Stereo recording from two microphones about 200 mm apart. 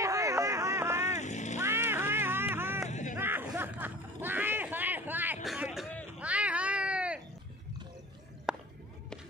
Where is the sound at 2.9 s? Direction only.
35° left (ahead or behind).